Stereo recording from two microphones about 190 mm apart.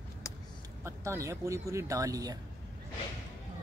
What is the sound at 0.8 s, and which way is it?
Speech, 15° right (ahead or behind).